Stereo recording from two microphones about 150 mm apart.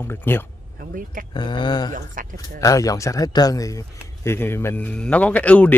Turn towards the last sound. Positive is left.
turn(degrees=10)  # may be behind; listen again after turning